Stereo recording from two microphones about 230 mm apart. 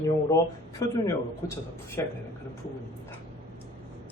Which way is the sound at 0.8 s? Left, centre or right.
Centre.